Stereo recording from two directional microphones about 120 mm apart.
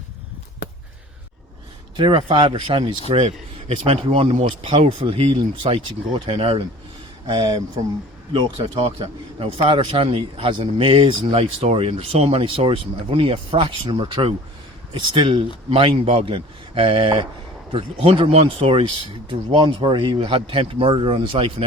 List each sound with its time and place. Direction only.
2.0 s a man's voice: 45° right (ahead or behind)
3.1 s a man's voice: 55° right (ahead or behind)
5.6 s a man's voice: 45° right (ahead or behind)